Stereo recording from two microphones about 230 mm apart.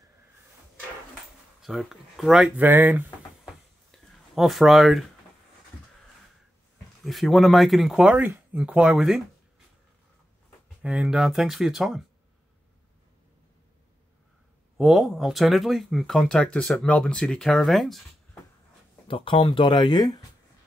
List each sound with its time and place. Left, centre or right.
1.6 s speech: centre
3.9 s a sound: centre
4.4 s speech: centre
7.1 s speech: centre
10.8 s speech: centre
14.8 s speech: centre
19.0 s speech: left